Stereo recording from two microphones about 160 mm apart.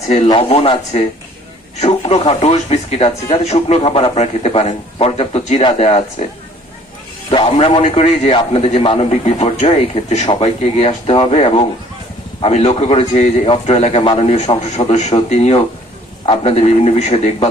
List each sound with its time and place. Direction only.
0.3 s a man's voice: 35° left (ahead or behind)
7.3 s a man's voice: 30° left (ahead or behind)